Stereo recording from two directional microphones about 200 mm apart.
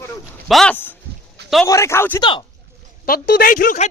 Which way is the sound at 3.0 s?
50° left (ahead or behind).